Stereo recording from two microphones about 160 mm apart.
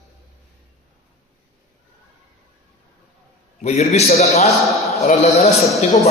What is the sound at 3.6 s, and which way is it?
A man's voice, 40° left (ahead or behind).